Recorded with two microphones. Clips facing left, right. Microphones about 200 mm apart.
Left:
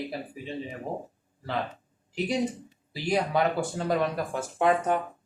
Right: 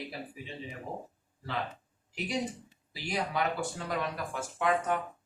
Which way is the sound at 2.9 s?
35° left (ahead or behind).